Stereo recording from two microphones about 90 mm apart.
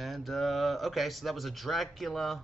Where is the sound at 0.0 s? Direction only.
Centre (ahead or behind).